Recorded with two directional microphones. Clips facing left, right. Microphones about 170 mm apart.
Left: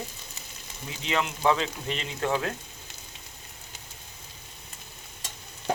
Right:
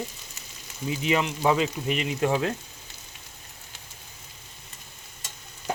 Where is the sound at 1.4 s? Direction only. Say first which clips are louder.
Right 2 dB; 10° right (ahead or behind).